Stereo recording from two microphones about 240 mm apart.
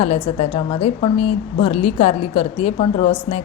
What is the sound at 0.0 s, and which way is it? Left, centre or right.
A woman's voice, left.